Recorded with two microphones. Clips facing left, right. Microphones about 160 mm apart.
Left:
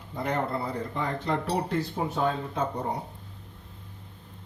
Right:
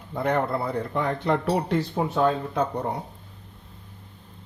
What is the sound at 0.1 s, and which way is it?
Speech, 60° right (ahead or behind).